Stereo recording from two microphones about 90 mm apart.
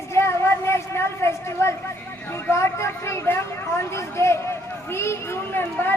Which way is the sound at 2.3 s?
30° left (ahead or behind).